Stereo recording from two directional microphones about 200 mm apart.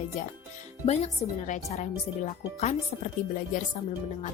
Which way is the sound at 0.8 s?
35° left (ahead or behind).